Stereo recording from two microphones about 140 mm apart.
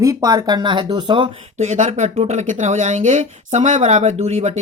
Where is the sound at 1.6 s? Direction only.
55° right (ahead or behind).